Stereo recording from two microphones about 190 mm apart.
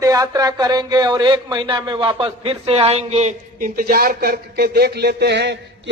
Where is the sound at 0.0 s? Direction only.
20° right (ahead or behind).